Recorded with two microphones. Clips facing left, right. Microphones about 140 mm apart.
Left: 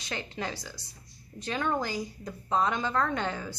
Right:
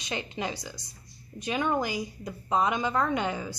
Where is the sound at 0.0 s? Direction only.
15° right (ahead or behind).